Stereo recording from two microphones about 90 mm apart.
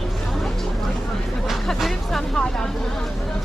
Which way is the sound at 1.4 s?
Centre (ahead or behind).